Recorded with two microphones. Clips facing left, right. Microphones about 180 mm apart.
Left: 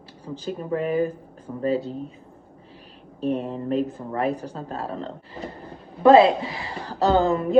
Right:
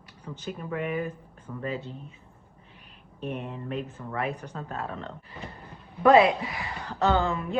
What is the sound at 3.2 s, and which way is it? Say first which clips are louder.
Speech: left 9 dB; 35° left (ahead or behind).